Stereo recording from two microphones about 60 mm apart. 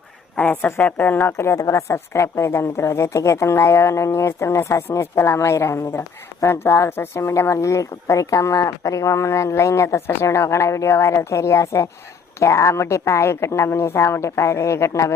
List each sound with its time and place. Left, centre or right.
0.3 s a woman's voice: left
1.3 s a woman's voice: left
1.5 s a woman's voice: left
1.9 s a woman's voice: left
7.5 s a woman's voice: left